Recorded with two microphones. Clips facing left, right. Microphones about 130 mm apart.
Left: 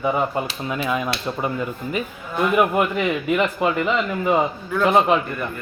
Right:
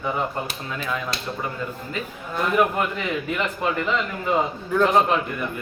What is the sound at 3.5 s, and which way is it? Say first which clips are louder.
Speech: left 3 dB; 10° left (ahead or behind).